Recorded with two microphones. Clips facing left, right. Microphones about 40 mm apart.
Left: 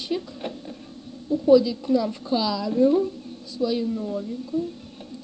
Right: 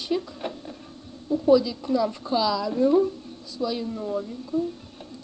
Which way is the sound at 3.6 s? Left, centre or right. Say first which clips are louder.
Left 3 dB; centre.